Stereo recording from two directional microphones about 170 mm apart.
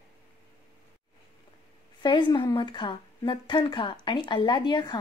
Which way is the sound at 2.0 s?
30° left (ahead or behind).